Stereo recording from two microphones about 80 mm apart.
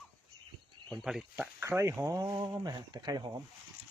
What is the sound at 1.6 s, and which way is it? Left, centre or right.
Speech, right.